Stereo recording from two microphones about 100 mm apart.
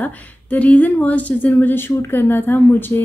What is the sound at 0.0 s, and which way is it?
Speech, 15° left (ahead or behind).